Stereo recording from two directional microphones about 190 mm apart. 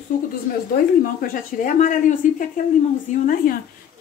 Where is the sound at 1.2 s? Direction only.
45° left (ahead or behind).